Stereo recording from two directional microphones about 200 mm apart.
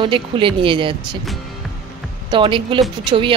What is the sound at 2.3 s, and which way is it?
Speech, 25° right (ahead or behind).